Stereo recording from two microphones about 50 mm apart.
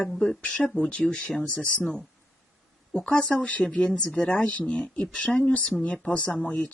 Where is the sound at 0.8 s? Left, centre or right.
Left.